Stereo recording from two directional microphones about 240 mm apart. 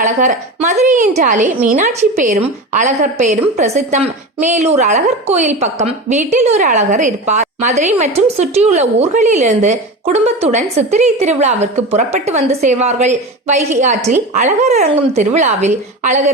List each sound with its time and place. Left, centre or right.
0.0 s a woman's voice: right